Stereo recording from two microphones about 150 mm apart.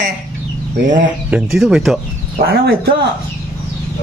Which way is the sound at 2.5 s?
90° right.